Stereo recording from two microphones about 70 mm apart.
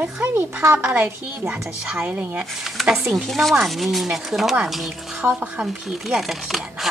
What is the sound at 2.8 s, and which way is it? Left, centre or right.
Speech, centre.